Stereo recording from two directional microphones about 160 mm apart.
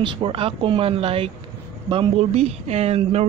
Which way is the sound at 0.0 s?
35° right (ahead or behind).